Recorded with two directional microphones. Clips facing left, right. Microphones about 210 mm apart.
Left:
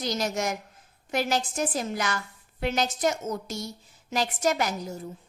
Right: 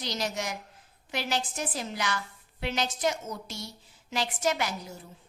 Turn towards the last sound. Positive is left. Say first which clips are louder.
# left 3 dB
turn(degrees=45)  # may be behind; listen again after turning